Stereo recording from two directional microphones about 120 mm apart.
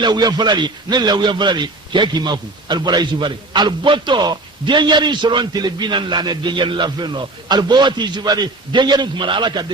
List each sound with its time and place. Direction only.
0.0 s a man's voice: 35° right (ahead or behind)